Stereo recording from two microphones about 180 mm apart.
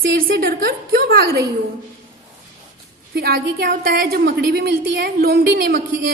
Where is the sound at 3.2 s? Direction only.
60° right (ahead or behind).